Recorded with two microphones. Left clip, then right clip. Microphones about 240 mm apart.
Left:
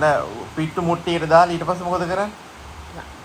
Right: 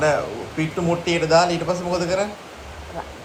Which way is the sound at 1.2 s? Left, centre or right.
Left.